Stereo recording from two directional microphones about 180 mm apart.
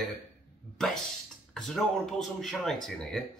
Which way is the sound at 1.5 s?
5° left (ahead or behind).